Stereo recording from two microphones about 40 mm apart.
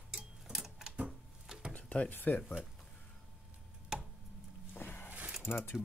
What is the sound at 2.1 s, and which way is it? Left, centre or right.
Speech, left.